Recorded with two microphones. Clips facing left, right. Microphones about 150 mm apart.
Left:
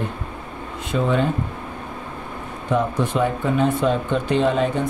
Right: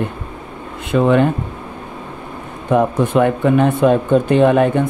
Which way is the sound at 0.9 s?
65° right (ahead or behind).